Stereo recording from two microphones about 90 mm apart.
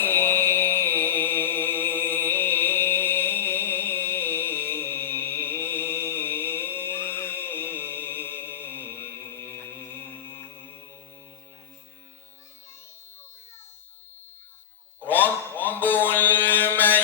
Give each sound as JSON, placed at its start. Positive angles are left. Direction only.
{"t": 0.0, "sound": "music", "side_deg": 25}
{"t": 15.0, "sound": "mantra", "side_deg": 20}